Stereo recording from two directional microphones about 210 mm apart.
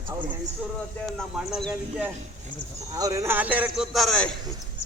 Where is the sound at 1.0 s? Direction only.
Centre (ahead or behind).